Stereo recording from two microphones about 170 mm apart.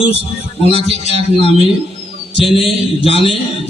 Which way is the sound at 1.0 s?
40° right (ahead or behind).